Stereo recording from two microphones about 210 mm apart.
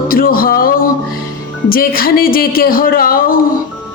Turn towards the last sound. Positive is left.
turn(degrees=45)  # may be behind; listen again after turning